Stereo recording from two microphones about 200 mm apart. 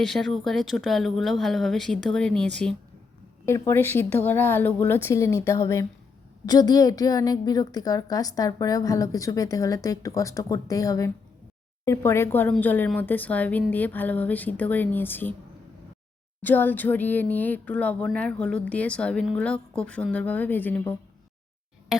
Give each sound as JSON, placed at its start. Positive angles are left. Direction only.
{"t": 0.0, "sound": "a woman's voice", "side_deg": 0}
{"t": 16.4, "sound": "a woman's voice", "side_deg": 10}